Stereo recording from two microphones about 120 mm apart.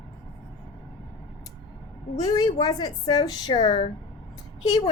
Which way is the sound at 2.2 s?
35° left (ahead or behind).